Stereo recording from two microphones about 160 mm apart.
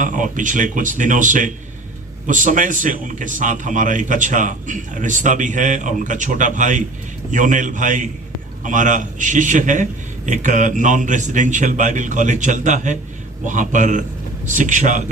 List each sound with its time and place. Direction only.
0.0 s a man's voice: 55° right (ahead or behind)